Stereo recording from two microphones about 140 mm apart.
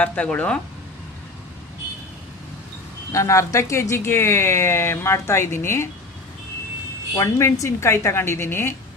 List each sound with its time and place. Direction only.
0.0 s speech: 10° left (ahead or behind)
3.1 s speech: 20° left (ahead or behind)
7.2 s speech: 20° left (ahead or behind)